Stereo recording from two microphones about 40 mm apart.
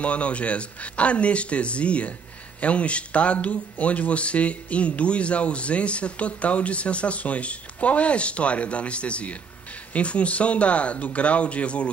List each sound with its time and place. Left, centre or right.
0.0 s speech: left